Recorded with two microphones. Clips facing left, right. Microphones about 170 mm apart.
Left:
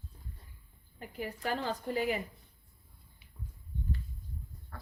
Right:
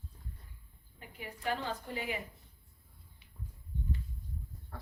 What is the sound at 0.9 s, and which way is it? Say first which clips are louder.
A woman's voice: left 7 dB; 40° left (ahead or behind).